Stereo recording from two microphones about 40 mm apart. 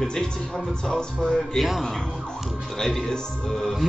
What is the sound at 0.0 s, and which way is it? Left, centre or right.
A man's voice, centre.